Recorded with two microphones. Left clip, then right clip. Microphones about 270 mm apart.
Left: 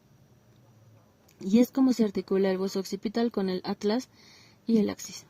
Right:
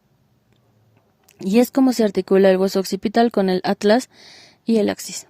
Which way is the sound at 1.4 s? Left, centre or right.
Right.